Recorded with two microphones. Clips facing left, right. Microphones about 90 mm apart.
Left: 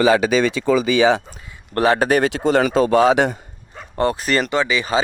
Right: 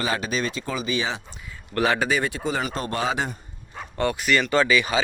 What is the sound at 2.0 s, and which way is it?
A man's voice, 70° left (ahead or behind).